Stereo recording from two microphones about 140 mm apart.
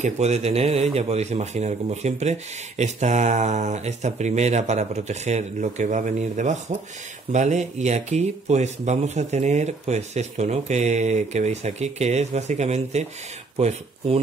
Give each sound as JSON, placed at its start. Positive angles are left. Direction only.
{"t": 0.0, "sound": "speech", "side_deg": -50}